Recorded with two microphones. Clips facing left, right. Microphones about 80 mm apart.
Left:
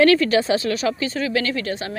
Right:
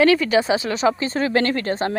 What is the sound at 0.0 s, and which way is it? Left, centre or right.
Speech, centre.